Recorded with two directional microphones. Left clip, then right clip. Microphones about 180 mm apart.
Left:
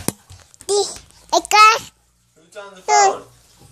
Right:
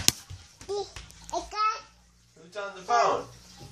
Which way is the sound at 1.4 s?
60° left (ahead or behind).